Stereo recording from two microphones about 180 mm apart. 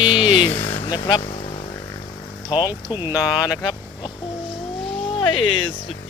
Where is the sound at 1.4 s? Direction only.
30° left (ahead or behind).